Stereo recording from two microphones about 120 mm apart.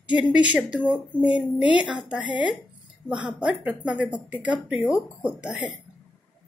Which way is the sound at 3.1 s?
10° right (ahead or behind).